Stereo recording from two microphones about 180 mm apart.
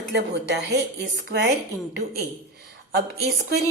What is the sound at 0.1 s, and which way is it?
Speech, 70° right (ahead or behind).